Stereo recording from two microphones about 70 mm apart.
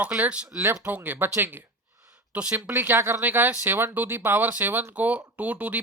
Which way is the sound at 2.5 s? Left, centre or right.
Right.